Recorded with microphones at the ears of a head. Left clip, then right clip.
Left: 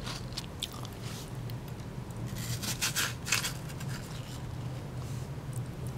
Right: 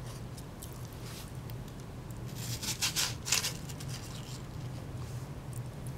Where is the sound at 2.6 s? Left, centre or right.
Centre.